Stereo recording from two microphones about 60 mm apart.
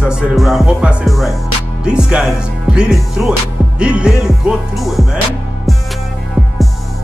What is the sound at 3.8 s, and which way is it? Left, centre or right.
Music, centre.